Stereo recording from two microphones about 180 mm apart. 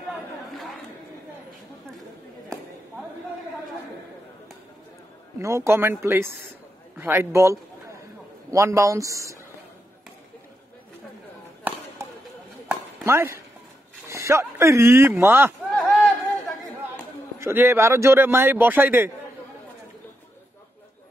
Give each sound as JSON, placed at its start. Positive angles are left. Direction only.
{"t": 5.4, "sound": "speech", "side_deg": -15}
{"t": 12.0, "sound": "a sound", "side_deg": -15}
{"t": 12.6, "sound": "chop", "side_deg": -15}
{"t": 14.0, "sound": "speech", "side_deg": -15}
{"t": 15.7, "sound": "a sound", "side_deg": 5}
{"t": 17.4, "sound": "speech", "side_deg": -15}